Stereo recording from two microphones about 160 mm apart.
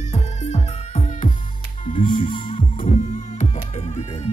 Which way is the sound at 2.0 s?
30° left (ahead or behind).